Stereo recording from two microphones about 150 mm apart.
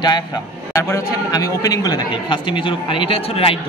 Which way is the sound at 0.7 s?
20° left (ahead or behind).